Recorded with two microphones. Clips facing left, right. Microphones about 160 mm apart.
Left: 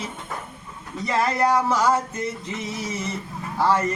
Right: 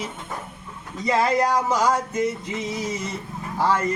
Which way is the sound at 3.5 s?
10° right (ahead or behind).